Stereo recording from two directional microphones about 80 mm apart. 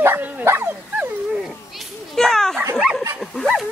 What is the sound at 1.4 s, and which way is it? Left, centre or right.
Children playing, centre.